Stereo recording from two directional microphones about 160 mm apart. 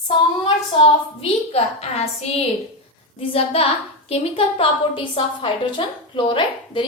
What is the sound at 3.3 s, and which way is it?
A woman's voice, 35° left (ahead or behind).